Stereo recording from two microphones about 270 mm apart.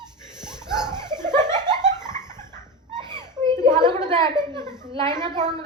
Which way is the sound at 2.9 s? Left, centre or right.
Centre.